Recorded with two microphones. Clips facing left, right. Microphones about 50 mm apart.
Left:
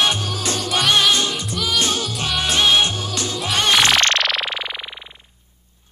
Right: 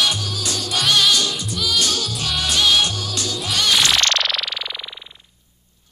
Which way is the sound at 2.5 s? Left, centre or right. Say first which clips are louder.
Left 1 dB; left.